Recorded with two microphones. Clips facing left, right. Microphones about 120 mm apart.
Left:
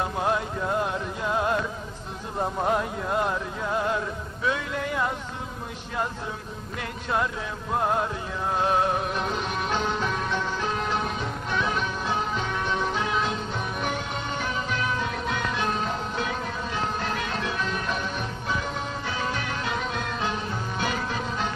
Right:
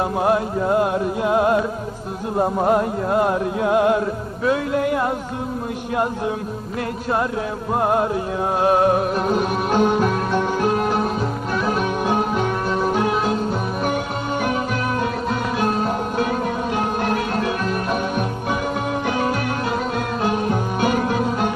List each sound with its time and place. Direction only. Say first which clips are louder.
0.0 s music: right 7 dB; 50° right (ahead or behind)
2.6 s music: right 7 dB; 50° right (ahead or behind)
4.0 s music: right 7 dB; 50° right (ahead or behind)
7.7 s music: right 6 dB; 50° right (ahead or behind)